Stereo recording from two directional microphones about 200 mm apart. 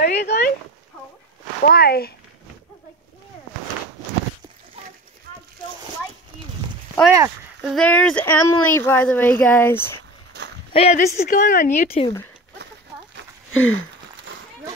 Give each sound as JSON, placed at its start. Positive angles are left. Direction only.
{"t": 0.0, "sound": "dog", "side_deg": 55}
{"t": 1.6, "sound": "speech", "side_deg": 50}
{"t": 7.6, "sound": "speech", "side_deg": 5}
{"t": 10.3, "sound": "a sound", "side_deg": -55}
{"t": 10.7, "sound": "speech", "side_deg": 35}
{"t": 13.5, "sound": "a sound", "side_deg": 75}